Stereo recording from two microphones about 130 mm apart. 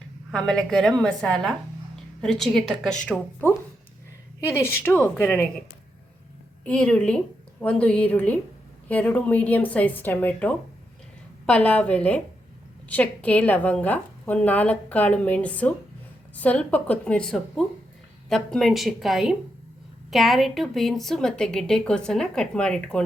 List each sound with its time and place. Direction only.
0.3 s a woman's voice: 5° left (ahead or behind)
6.7 s a woman's voice: 10° left (ahead or behind)